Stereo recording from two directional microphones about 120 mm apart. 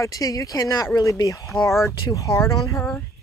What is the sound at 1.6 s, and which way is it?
Speech, centre (ahead or behind).